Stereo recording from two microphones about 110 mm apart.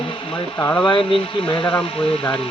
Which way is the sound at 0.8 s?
50° left (ahead or behind).